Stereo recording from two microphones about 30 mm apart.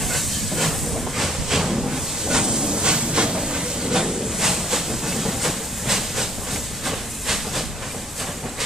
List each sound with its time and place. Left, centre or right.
0.1 s hiss: centre; by 3.3 s right
3.3 s train: centre
6.9 s steam: centre